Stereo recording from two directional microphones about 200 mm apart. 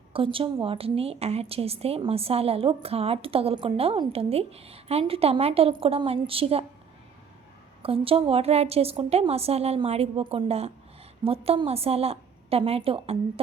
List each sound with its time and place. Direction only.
0.1 s a woman's voice: 25° right (ahead or behind)
7.8 s a woman's voice: 30° right (ahead or behind)